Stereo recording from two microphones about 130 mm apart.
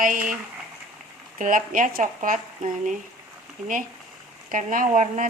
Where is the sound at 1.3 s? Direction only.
90° right.